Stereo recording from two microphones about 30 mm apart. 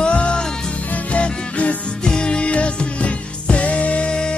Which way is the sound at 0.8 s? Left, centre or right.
Left.